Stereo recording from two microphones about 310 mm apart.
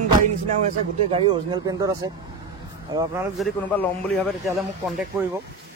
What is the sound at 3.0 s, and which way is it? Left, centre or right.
Speech, centre.